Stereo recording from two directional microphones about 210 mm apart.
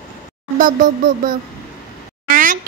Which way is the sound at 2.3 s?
40° right (ahead or behind).